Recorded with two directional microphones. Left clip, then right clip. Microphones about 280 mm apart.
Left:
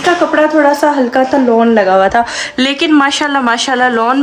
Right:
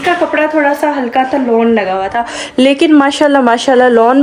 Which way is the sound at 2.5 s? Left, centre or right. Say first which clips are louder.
Right 3 dB; centre.